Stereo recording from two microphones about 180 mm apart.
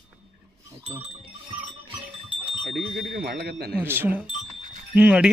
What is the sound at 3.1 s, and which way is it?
Speech, 60° right (ahead or behind).